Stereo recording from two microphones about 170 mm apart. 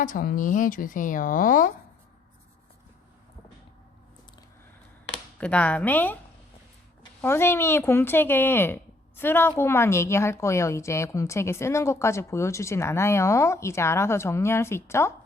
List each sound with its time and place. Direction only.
0.0 s speech: 55° left (ahead or behind)
5.4 s speech: 5° left (ahead or behind)
7.2 s speech: 15° left (ahead or behind)